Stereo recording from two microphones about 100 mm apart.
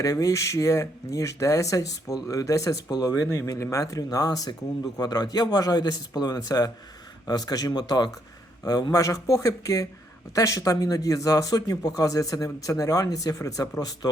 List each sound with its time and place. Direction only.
0.0 s speech: 35° left (ahead or behind)